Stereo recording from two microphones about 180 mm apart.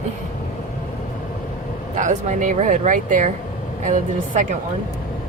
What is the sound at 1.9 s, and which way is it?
Speech, 45° right (ahead or behind).